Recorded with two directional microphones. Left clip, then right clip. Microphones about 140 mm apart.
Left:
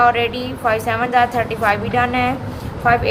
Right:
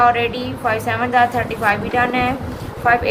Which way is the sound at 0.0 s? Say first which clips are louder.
Even; 50° left (ahead or behind).